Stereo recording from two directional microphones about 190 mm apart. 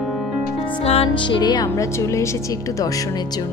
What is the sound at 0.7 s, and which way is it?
Speech, 30° left (ahead or behind).